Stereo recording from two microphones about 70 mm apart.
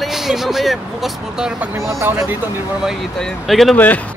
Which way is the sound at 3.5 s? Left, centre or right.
Centre.